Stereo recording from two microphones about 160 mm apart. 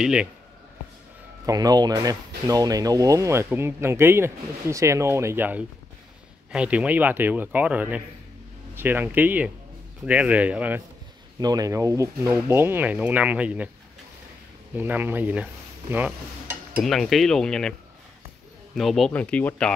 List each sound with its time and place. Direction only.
0.0 s speech: 5° right (ahead or behind)
1.4 s speech: 20° right (ahead or behind)
11.3 s speech: 25° right (ahead or behind)
14.8 s speech: 10° right (ahead or behind)
16.8 s speech: centre (ahead or behind)
18.8 s speech: centre (ahead or behind)